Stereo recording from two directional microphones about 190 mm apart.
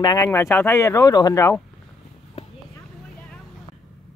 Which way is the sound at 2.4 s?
35° left (ahead or behind).